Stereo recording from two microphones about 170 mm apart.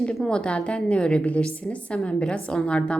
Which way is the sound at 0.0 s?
5° left (ahead or behind).